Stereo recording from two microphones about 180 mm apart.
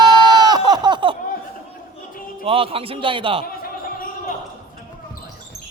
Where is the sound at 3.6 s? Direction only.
50° left (ahead or behind).